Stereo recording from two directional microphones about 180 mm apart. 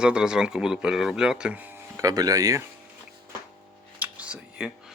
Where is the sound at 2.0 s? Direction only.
20° right (ahead or behind).